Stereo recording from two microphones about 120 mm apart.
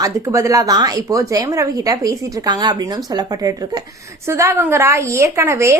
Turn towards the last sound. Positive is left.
turn(degrees=-25)  # may be behind; listen again after turning